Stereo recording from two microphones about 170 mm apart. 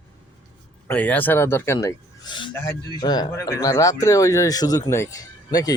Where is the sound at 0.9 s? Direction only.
10° left (ahead or behind).